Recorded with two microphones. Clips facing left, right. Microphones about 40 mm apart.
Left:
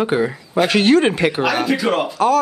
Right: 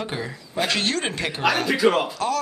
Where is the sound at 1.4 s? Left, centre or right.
Centre.